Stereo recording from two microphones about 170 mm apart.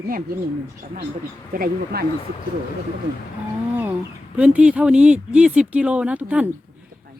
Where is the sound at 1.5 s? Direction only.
60° right (ahead or behind).